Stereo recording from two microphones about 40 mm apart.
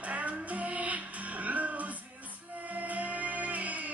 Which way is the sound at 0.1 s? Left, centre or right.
Right.